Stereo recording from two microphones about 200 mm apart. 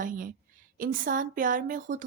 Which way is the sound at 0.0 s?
45° right (ahead or behind).